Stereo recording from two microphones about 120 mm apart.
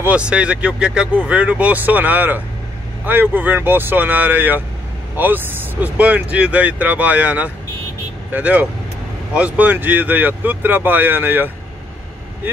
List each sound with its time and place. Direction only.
0.0 s speech: 10° right (ahead or behind)